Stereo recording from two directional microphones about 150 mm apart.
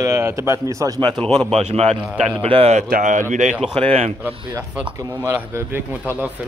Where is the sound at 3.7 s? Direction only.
40° right (ahead or behind).